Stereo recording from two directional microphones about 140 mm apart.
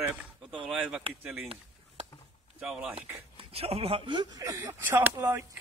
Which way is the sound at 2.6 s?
5° right (ahead or behind).